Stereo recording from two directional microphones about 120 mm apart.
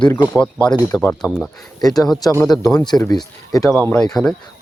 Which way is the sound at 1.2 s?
Centre (ahead or behind).